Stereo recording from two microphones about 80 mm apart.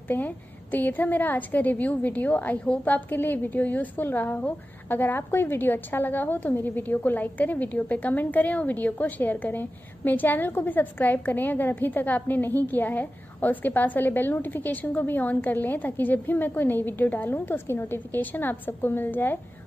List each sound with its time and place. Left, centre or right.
0.1 s a woman's voice: left